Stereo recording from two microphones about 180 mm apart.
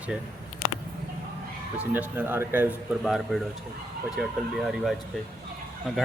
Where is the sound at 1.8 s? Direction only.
10° right (ahead or behind).